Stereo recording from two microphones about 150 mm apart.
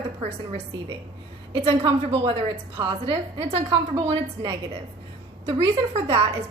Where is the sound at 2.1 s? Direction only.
45° right (ahead or behind).